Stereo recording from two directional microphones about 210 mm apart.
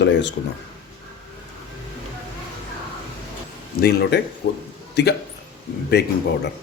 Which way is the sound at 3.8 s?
50° left (ahead or behind).